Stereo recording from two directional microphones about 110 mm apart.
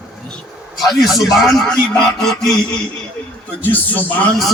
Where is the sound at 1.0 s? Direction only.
Centre (ahead or behind).